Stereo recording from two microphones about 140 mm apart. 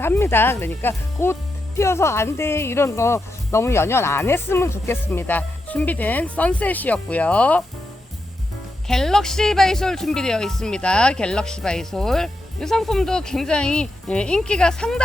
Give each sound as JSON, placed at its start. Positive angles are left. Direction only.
{"t": 0.0, "sound": "speech", "side_deg": 15}
{"t": 8.9, "sound": "speech", "side_deg": 5}